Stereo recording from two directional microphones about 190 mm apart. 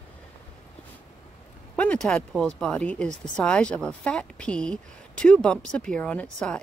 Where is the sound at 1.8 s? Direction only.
5° left (ahead or behind).